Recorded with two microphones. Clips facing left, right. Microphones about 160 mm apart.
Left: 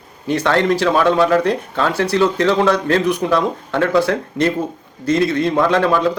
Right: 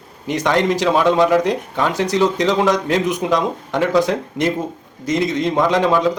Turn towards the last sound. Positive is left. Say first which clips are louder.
# even
turn(degrees=-15)  # may be behind; listen again after turning